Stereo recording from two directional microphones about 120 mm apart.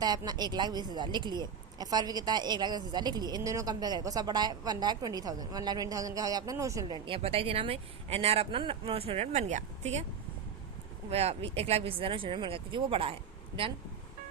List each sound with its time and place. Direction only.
0.0 s a woman's voice: 35° right (ahead or behind); by 10.1 s 65° right (ahead or behind)
11.1 s speech: 60° right (ahead or behind)